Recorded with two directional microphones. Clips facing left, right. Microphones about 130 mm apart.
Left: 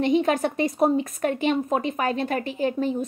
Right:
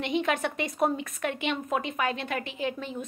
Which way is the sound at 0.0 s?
40° left (ahead or behind).